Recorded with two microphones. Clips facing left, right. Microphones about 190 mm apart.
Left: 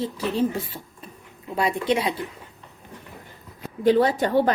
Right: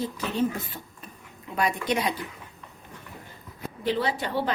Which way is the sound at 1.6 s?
30° left (ahead or behind).